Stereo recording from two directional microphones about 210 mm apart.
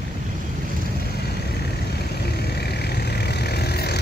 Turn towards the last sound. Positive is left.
turn(degrees=50)  # may be behind; listen again after turning